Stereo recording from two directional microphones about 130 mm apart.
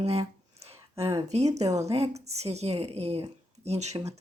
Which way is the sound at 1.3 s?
60° right (ahead or behind).